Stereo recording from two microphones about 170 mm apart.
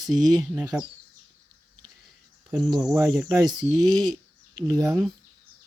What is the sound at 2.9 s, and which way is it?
Speech, 20° right (ahead or behind).